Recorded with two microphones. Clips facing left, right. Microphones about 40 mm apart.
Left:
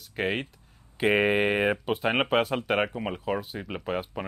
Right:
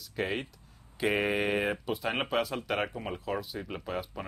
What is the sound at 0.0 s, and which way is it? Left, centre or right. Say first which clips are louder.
Speech: left 4 dB; left.